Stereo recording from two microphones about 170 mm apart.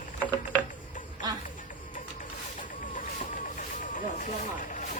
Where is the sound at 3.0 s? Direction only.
50° left (ahead or behind).